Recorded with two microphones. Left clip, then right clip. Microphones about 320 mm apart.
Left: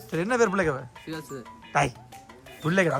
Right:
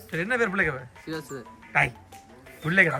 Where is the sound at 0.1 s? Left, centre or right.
Centre.